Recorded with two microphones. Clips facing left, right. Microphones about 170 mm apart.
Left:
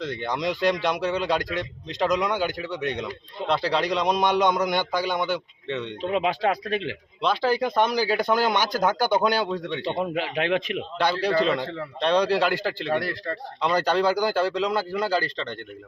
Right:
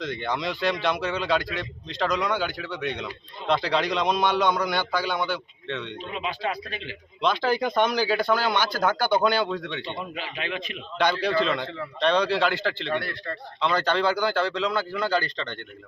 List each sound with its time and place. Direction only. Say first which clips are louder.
0.0 s speech: left 1 dB; 10° left (ahead or behind)
3.5 s speech: even; 5° left (ahead or behind)
6.0 s speech: left 7 dB; 65° left (ahead or behind)
7.2 s speech: left 1 dB; 5° left (ahead or behind)
10.0 s speech: left 8 dB; 65° left (ahead or behind)
11.2 s a man's voice: left 2 dB; 40° left (ahead or behind)
12.0 s speech: left 1 dB; 10° left (ahead or behind)
12.9 s a man's voice: left 3 dB; 35° left (ahead or behind)
13.6 s speech: left 2 dB; 10° left (ahead or behind)